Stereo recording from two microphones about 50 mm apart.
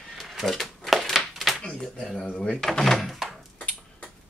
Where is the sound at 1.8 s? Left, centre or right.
Centre.